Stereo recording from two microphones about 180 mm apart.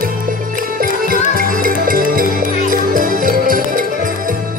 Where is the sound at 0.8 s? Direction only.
50° right (ahead or behind).